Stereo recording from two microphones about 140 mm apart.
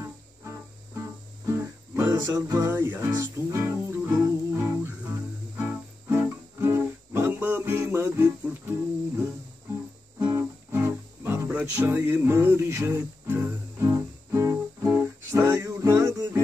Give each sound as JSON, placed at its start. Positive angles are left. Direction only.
{"t": 0.0, "sound": "music", "side_deg": -20}
{"t": 2.7, "sound": "music", "side_deg": -15}
{"t": 10.1, "sound": "music", "side_deg": -20}